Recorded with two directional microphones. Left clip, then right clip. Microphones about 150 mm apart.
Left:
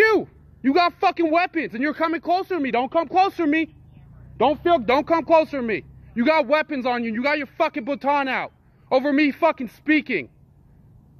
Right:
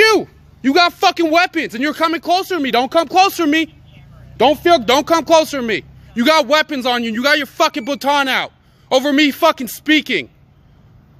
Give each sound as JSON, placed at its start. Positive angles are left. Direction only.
{"t": 0.0, "sound": "a man's voice", "side_deg": -10}
{"t": 2.7, "sound": "speech", "side_deg": -40}
{"t": 3.1, "sound": "a man's voice", "side_deg": -20}
{"t": 4.4, "sound": "speech", "side_deg": -40}
{"t": 4.8, "sound": "a man's voice", "side_deg": -25}
{"t": 9.8, "sound": "speech", "side_deg": -15}